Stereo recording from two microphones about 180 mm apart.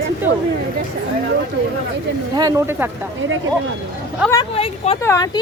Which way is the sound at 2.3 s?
20° right (ahead or behind).